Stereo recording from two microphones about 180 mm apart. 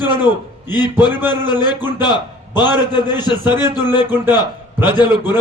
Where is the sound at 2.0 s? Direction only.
25° left (ahead or behind).